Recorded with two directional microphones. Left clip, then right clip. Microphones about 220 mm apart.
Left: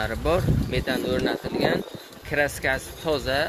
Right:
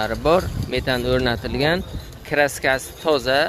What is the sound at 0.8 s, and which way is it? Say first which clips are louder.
Speech: right 6 dB; 30° right (ahead or behind).